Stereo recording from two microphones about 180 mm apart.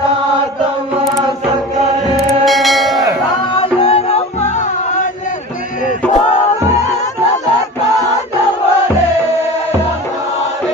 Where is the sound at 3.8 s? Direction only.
35° left (ahead or behind).